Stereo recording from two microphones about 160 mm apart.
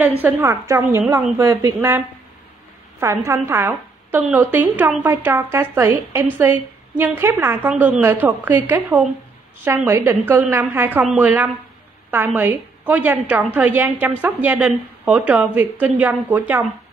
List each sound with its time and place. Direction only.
0.2 s a woman's voice: 15° right (ahead or behind)